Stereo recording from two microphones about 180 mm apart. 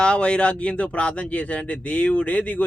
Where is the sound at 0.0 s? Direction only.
5° left (ahead or behind).